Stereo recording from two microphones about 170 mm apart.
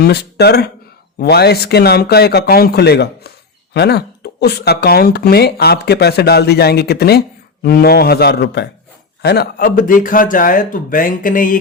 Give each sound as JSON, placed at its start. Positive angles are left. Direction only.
{"t": 0.0, "sound": "speech", "side_deg": 70}